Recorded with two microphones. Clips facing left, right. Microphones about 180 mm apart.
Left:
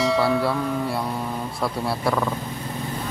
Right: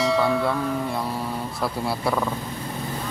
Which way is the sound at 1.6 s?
Centre (ahead or behind).